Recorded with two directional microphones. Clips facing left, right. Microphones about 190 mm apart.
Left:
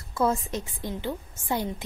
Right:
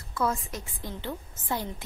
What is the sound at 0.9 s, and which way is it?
Speech, 15° left (ahead or behind).